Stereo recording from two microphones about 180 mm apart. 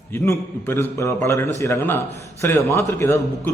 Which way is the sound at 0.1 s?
15° left (ahead or behind).